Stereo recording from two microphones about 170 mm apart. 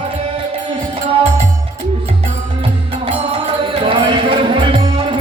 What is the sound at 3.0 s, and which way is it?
Music, 35° right (ahead or behind).